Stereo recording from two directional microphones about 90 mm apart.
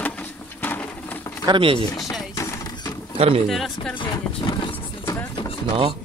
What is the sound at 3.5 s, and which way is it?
Speech, centre (ahead or behind).